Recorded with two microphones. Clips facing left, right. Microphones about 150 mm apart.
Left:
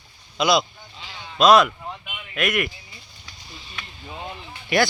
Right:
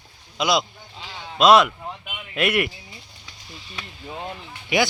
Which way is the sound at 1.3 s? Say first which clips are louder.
Even; 25° right (ahead or behind).